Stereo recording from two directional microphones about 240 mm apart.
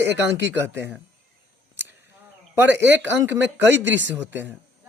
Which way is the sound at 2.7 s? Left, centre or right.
Right.